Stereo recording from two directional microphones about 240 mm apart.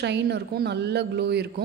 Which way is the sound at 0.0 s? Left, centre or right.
Right.